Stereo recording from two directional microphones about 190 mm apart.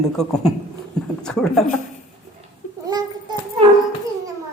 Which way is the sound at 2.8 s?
20° right (ahead or behind).